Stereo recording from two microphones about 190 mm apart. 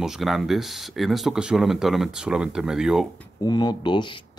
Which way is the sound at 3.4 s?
20° left (ahead or behind).